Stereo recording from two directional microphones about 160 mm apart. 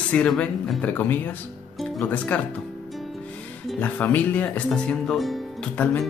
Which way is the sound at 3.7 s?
10° left (ahead or behind).